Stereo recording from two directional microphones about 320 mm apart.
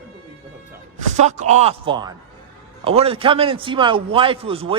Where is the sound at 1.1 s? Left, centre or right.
Right.